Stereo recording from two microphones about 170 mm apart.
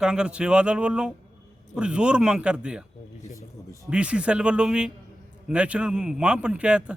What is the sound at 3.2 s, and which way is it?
Speech, 20° left (ahead or behind).